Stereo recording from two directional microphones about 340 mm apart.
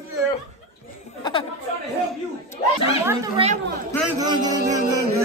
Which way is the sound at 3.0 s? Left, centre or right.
Centre.